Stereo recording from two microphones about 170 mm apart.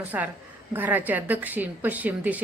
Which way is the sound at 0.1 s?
10° right (ahead or behind).